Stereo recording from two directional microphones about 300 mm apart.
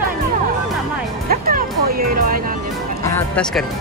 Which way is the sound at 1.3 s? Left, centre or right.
Right.